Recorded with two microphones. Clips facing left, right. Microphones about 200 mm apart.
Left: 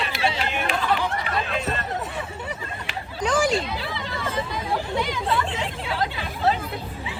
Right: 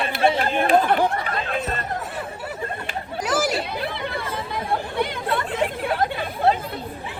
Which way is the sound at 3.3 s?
5° right (ahead or behind).